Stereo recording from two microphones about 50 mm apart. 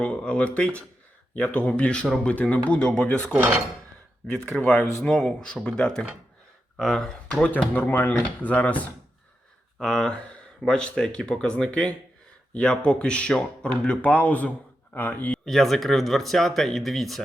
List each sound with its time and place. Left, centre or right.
0.0 s speech: left
3.3 s dishes: right
4.6 s speech: left
7.7 s speech: left
9.8 s speech: centre; by 15.4 s left
15.4 s speech: centre